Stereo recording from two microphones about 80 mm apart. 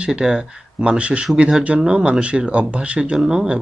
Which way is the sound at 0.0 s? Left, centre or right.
Centre.